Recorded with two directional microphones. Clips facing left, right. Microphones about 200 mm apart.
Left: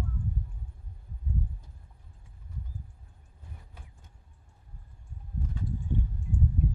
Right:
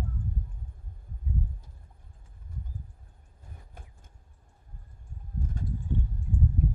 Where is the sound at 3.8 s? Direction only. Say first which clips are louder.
Right 3 dB; 50° right (ahead or behind).